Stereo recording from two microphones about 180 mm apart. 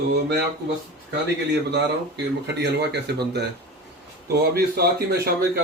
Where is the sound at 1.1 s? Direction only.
70° right (ahead or behind).